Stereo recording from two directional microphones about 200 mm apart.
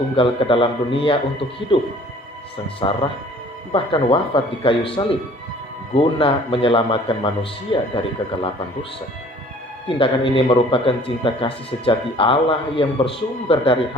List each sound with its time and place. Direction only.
0.2 s speech: 25° left (ahead or behind)